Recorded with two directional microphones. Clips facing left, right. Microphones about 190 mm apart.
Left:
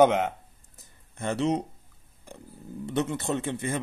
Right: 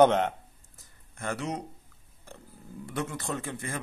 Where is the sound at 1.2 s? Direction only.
25° left (ahead or behind).